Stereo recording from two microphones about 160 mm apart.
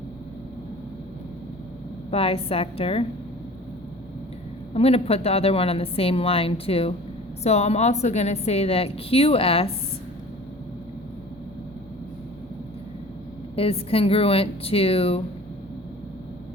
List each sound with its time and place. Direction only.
2.0 s a woman's voice: 35° left (ahead or behind)
4.7 s a woman's voice: 40° left (ahead or behind)
13.6 s a woman's voice: 40° left (ahead or behind)